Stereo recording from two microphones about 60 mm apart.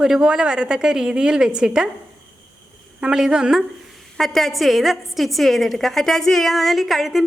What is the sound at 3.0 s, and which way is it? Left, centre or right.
Speech, centre.